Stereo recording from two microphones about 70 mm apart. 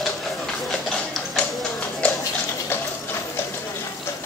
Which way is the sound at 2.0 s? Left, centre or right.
Centre.